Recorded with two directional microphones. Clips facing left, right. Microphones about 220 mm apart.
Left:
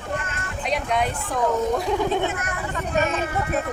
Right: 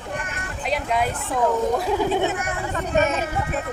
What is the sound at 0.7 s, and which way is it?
A woman's voice, centre (ahead or behind).